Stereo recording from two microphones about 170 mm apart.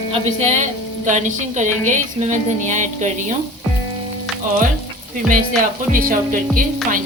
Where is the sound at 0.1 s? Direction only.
45° right (ahead or behind).